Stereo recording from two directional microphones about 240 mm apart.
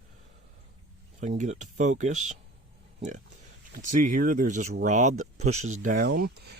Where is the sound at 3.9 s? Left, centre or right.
Right.